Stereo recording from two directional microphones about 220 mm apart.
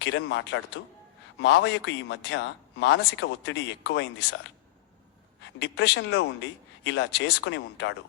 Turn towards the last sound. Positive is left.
turn(degrees=55)  # may be behind; listen again after turning